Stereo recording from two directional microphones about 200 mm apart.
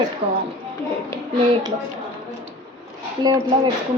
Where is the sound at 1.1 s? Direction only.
15° left (ahead or behind).